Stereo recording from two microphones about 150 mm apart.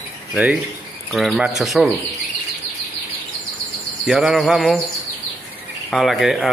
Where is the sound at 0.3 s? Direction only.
10° right (ahead or behind).